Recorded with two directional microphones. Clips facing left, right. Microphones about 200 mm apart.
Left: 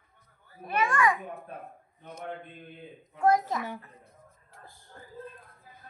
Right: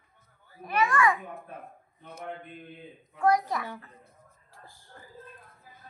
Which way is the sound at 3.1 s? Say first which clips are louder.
Even; 25° left (ahead or behind).